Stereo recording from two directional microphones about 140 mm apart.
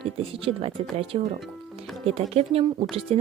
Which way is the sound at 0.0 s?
40° right (ahead or behind).